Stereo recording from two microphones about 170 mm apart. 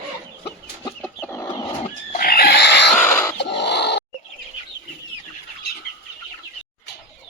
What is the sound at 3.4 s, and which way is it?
Oink, 85° left.